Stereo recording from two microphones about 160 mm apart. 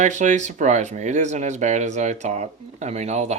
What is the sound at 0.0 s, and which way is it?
Speech, 50° right (ahead or behind).